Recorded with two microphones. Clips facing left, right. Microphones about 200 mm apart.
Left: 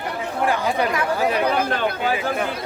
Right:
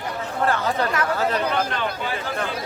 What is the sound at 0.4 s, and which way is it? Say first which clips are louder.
Speech: left 1 dB; 15° left (ahead or behind).